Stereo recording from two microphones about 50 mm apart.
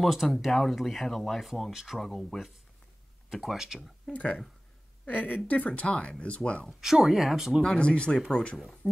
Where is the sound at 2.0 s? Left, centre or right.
Centre.